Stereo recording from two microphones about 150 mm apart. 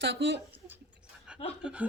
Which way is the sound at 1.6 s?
10° right (ahead or behind).